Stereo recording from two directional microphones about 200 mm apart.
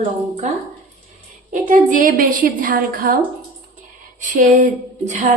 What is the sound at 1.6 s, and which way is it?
A woman's voice, 40° right (ahead or behind).